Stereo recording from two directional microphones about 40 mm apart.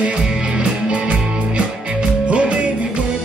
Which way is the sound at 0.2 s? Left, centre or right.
Centre.